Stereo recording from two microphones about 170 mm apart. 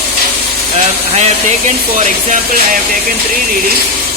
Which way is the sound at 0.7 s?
40° right (ahead or behind).